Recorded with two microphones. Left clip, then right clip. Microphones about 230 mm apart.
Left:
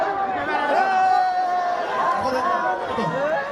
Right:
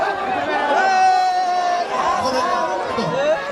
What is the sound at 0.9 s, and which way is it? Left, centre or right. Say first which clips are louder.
Music: right 4 dB; right.